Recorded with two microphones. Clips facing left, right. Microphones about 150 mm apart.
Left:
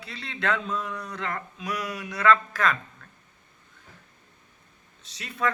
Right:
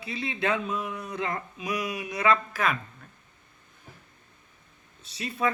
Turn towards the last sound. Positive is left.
turn(degrees=-10)  # may be behind; listen again after turning